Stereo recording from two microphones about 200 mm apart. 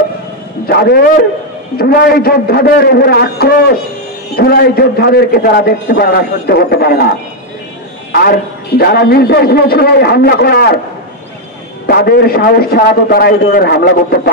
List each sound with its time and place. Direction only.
0.7 s a man's voice: 50° left (ahead or behind)
11.8 s a man's voice: 50° left (ahead or behind)